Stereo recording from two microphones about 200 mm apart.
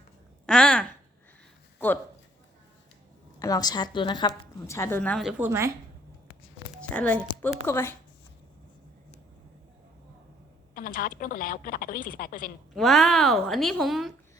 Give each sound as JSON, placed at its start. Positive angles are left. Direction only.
{"t": 0.4, "sound": "speech", "side_deg": 5}
{"t": 3.4, "sound": "a woman's voice", "side_deg": 20}
{"t": 6.7, "sound": "speech", "side_deg": 5}
{"t": 10.8, "sound": "a woman's voice", "side_deg": 45}
{"t": 12.7, "sound": "a woman's voice", "side_deg": 0}